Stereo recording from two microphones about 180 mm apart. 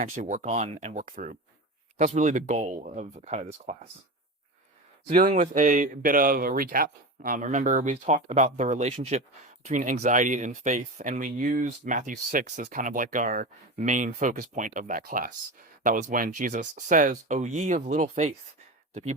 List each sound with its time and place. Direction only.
0.0 s speech: 45° right (ahead or behind)
5.3 s speech: 45° right (ahead or behind)